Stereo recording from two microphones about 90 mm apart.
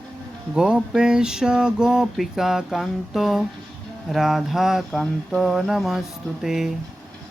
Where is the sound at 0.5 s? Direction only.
10° right (ahead or behind).